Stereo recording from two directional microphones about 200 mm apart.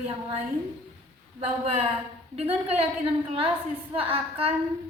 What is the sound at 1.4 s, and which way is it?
A woman's voice, 30° right (ahead or behind).